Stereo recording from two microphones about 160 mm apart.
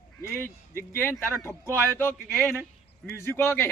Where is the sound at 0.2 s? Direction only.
15° left (ahead or behind).